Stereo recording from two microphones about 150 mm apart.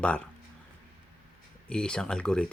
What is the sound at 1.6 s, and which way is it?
Speech, 5° left (ahead or behind).